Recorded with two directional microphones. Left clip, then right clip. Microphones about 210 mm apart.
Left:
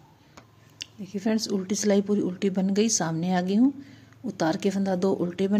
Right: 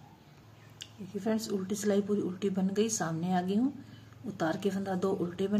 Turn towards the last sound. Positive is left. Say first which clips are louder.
# left 6 dB
turn(degrees=30)  # may be behind; listen again after turning